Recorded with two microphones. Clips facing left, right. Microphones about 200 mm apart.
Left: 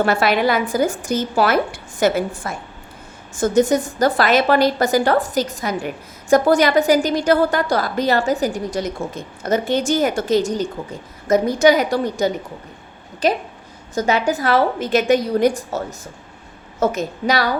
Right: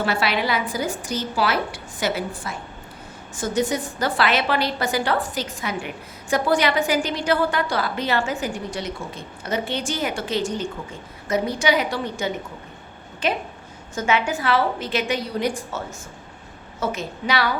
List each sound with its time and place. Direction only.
0.0 s a woman's voice: 50° left (ahead or behind)